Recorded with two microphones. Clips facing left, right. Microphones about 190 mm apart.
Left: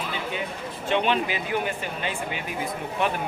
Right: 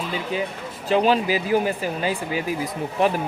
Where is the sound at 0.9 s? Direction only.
35° right (ahead or behind).